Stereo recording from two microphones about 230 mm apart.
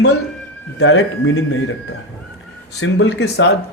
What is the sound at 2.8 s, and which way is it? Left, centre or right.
Speech, left.